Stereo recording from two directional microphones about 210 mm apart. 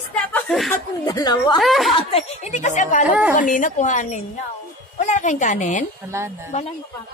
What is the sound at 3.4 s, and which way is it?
A woman's voice, 40° left (ahead or behind).